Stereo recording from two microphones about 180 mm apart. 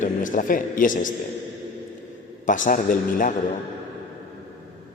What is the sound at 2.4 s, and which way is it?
Speech, 45° left (ahead or behind).